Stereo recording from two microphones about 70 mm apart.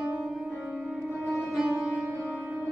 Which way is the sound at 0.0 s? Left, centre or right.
Centre.